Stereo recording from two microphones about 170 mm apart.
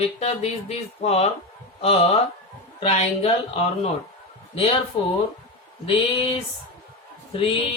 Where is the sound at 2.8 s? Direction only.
40° left (ahead or behind).